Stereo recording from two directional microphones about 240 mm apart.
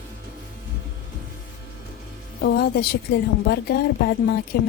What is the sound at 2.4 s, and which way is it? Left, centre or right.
Music, left.